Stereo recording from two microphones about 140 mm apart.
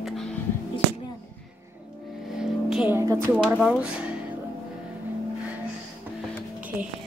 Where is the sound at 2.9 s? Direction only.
15° right (ahead or behind).